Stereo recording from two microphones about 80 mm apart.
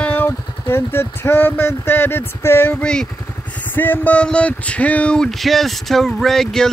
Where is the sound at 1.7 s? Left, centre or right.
Left.